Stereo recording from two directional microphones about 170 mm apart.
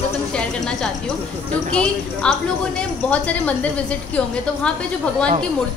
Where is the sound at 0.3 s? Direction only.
5° left (ahead or behind).